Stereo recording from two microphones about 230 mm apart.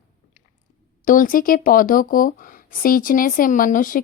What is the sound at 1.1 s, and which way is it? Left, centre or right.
A woman's voice, left.